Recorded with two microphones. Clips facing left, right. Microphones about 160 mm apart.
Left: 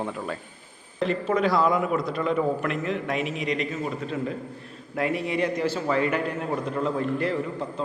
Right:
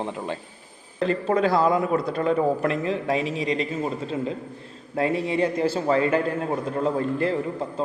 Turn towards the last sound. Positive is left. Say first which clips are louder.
# right 2 dB
turn(degrees=-30)  # may be behind; listen again after turning